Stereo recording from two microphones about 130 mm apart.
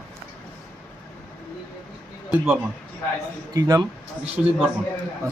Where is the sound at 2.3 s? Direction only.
5° right (ahead or behind).